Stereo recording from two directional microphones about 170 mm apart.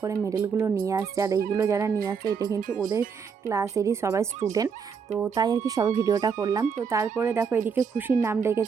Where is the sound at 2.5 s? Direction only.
55° right (ahead or behind).